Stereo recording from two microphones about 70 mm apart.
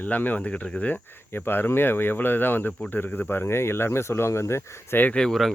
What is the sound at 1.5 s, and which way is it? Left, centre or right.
Speech, left.